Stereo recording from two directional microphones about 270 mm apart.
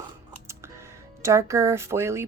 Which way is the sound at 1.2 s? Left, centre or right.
Centre.